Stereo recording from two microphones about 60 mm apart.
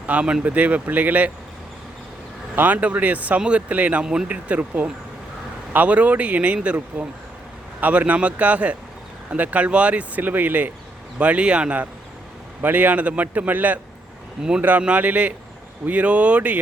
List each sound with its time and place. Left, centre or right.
0.0 s speech: right
2.6 s speech: right
4.0 s speech: centre
4.3 s speech: right